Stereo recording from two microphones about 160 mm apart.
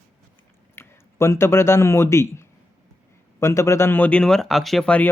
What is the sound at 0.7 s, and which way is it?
A man's voice, 15° left (ahead or behind).